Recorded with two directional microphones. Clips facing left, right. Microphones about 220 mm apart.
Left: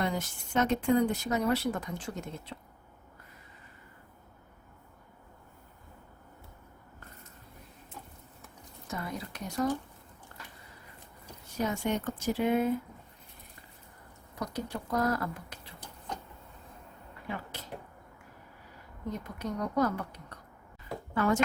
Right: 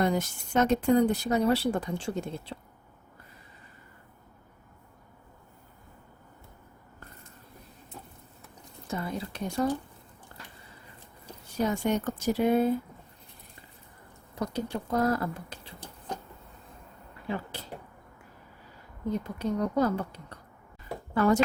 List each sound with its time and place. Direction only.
0.0 s speech: 40° right (ahead or behind)
8.9 s speech: 30° right (ahead or behind)
11.5 s speech: 35° right (ahead or behind)
14.3 s speech: 25° right (ahead or behind)
17.2 s speech: 30° right (ahead or behind)
19.4 s speech: 30° right (ahead or behind)